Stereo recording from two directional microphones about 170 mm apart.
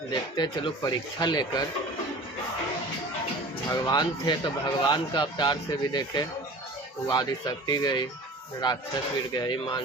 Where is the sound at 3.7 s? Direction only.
25° left (ahead or behind).